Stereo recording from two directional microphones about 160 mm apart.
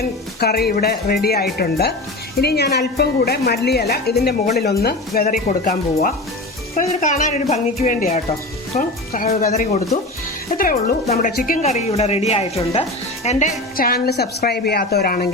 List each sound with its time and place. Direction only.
0.0 s speech: 75° left (ahead or behind)
2.4 s a woman's voice: 90° left; by 9.8 s 50° left (ahead or behind)
10.6 s speech: 60° left (ahead or behind); by 13.4 s 45° left (ahead or behind)
13.7 s speech: 70° left (ahead or behind)